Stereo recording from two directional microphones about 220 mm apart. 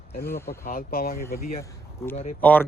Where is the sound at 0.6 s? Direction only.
40° left (ahead or behind).